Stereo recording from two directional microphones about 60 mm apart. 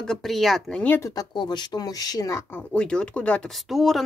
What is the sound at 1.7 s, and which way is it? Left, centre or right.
Speech, left.